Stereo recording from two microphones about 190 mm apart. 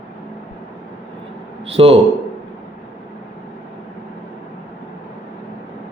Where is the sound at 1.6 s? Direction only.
30° right (ahead or behind).